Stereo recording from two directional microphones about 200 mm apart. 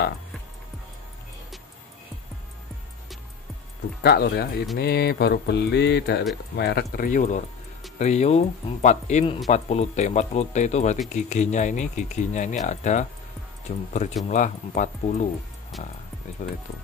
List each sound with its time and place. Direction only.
4.0 s speech: 50° left (ahead or behind); by 15.2 s 35° left (ahead or behind)
15.7 s speech: centre (ahead or behind)
16.4 s speech: 40° left (ahead or behind)